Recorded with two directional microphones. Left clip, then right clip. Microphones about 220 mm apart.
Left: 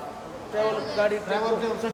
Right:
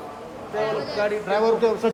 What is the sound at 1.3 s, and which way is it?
Speech, 30° right (ahead or behind).